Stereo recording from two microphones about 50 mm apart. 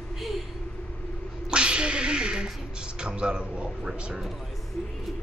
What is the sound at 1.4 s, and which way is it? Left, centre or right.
Speech, centre.